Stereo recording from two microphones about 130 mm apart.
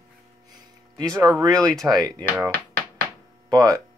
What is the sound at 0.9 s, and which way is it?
Speech, 30° right (ahead or behind).